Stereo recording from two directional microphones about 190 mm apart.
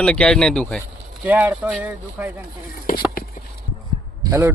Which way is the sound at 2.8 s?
50° left (ahead or behind).